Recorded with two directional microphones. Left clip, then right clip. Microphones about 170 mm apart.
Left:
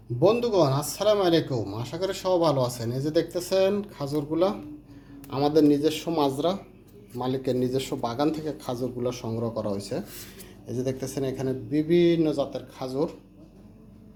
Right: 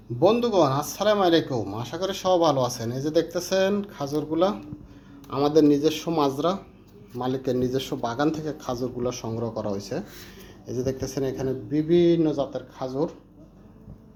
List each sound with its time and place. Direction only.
0.2 s speech: 5° left (ahead or behind)